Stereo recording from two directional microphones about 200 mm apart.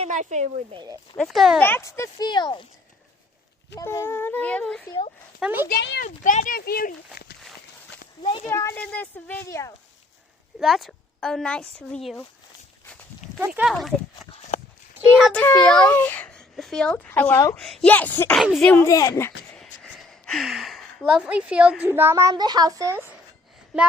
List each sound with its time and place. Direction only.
0.0 s speech: 35° right (ahead or behind)
1.1 s a woman's voice: centre (ahead or behind)
1.6 s speech: 15° left (ahead or behind)
3.8 s a child's voice: 15° left (ahead or behind)
5.4 s speech: 10° right (ahead or behind)
5.6 s speech: 55° left (ahead or behind)
6.2 s speech: 40° left (ahead or behind)
8.2 s a child's voice: 20° left (ahead or behind)
10.6 s a woman's voice: centre (ahead or behind)
13.4 s a woman's voice: 5° right (ahead or behind)
14.2 s horse: centre (ahead or behind)
15.3 s a child's voice: 5° left (ahead or behind)
19.5 s a woman's voice: 5° left (ahead or behind); by 23.1 s 10° right (ahead or behind)